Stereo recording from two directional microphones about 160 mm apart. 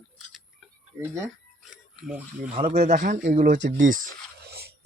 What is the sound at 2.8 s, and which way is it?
Speech, 50° right (ahead or behind).